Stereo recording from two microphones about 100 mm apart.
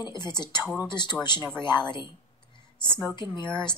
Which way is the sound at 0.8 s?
50° left (ahead or behind).